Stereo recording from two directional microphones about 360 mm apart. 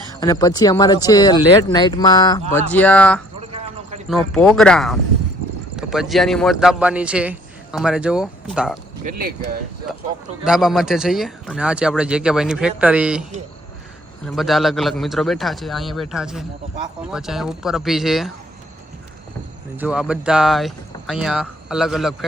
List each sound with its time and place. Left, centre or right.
0.2 s a man's voice: centre
9.0 s speech: right
10.4 s speech: centre
14.3 s speech: centre
19.7 s speech: centre